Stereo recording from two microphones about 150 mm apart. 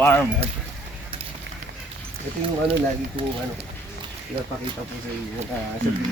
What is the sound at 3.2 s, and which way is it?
Speech, 35° right (ahead or behind).